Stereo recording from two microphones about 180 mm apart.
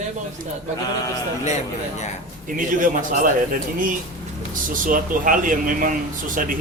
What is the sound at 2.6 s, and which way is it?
Speech, 50° right (ahead or behind).